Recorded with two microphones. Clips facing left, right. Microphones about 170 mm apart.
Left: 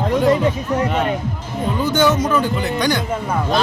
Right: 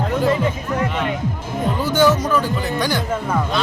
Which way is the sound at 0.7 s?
40° left (ahead or behind).